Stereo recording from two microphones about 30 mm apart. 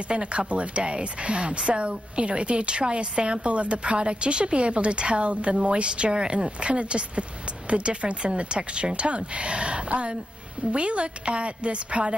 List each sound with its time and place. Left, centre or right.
0.1 s a woman's voice: right